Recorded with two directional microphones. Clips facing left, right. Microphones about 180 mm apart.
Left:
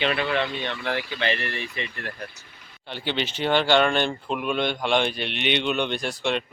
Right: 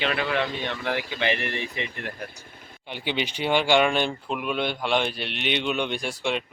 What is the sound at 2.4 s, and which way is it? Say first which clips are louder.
Vehicle: right 5 dB; 50° right (ahead or behind).